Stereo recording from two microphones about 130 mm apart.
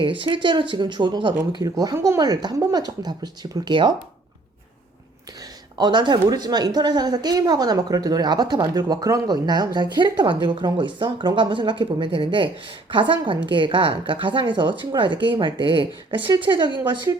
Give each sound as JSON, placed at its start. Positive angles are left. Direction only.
{"t": 0.0, "sound": "speech", "side_deg": -40}
{"t": 5.7, "sound": "speech", "side_deg": -35}